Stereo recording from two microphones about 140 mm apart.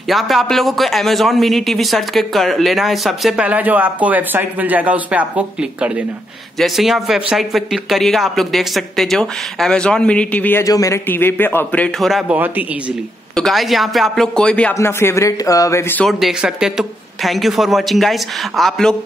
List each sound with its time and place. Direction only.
0.1 s a man's voice: centre (ahead or behind)
10.6 s a man's voice: 25° left (ahead or behind); by 12.4 s centre (ahead or behind)
13.4 s a man's voice: centre (ahead or behind)
14.7 s speech: 20° left (ahead or behind)
16.1 s a man's voice: centre (ahead or behind)